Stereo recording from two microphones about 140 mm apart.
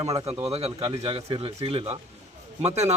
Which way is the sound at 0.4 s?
45° right (ahead or behind).